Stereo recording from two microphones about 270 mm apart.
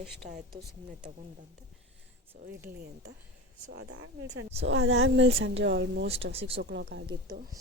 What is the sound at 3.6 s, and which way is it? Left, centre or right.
A woman's voice, right.